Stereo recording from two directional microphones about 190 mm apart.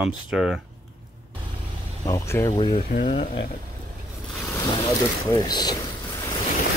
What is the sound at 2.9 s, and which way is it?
Speech, 40° left (ahead or behind).